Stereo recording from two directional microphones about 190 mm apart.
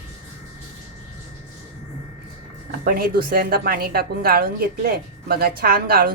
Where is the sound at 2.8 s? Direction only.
50° right (ahead or behind).